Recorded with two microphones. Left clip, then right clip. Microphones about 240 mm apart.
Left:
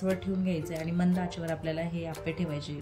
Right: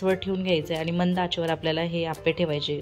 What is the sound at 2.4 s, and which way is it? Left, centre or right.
Speech, right.